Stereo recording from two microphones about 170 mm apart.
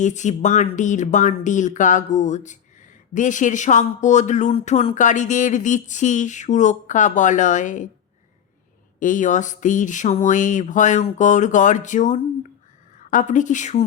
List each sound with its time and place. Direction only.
0.0 s speech: 45° left (ahead or behind)
9.0 s speech: 50° left (ahead or behind)